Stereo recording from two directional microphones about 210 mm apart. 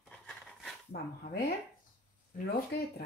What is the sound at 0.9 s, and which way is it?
Speech, 50° left (ahead or behind).